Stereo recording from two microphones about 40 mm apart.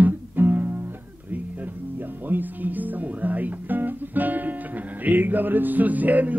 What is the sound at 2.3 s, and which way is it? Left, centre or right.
Guitar, right.